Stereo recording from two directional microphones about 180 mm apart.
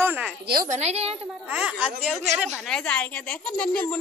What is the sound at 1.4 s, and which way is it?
Speech, 5° right (ahead or behind).